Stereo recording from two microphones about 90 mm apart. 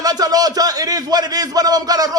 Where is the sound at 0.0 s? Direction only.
45° right (ahead or behind).